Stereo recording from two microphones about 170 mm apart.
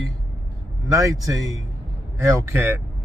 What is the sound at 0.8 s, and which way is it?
Speech, 20° right (ahead or behind).